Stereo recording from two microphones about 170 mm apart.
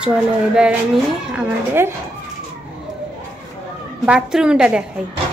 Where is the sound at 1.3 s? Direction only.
10° right (ahead or behind).